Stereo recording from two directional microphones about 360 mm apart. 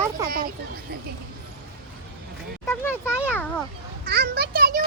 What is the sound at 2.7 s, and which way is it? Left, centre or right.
Speech, centre.